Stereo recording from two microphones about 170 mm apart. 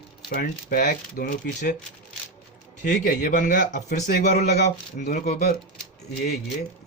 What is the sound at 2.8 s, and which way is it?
Speech, 50° left (ahead or behind).